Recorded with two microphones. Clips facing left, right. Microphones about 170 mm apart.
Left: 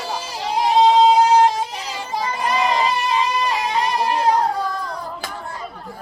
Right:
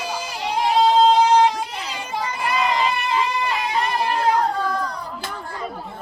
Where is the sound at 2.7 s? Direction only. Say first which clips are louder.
Left 2 dB; 40° left (ahead or behind).